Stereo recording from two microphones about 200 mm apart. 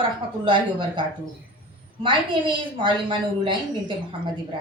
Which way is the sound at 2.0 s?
25° right (ahead or behind).